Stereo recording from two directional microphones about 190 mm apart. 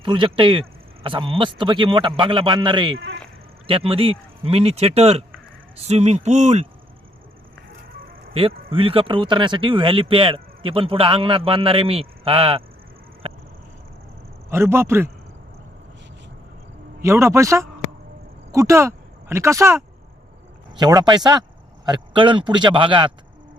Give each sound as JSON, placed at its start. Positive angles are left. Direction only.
{"t": 0.0, "sound": "speech", "side_deg": -25}
{"t": 8.3, "sound": "speech", "side_deg": -30}
{"t": 14.5, "sound": "a man's voice", "side_deg": -15}
{"t": 17.0, "sound": "a man's voice", "side_deg": -15}